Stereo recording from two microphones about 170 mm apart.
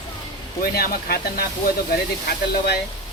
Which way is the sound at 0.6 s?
65° left (ahead or behind).